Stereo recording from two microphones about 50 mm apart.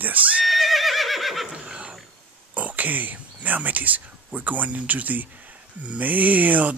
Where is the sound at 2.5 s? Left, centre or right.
Right.